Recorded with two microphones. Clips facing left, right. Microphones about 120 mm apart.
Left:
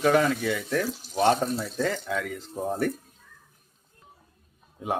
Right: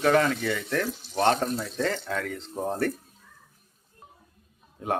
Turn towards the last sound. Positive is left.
turn(degrees=10)  # may be behind; listen again after turning